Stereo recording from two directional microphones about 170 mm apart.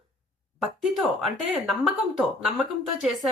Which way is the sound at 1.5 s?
Centre (ahead or behind).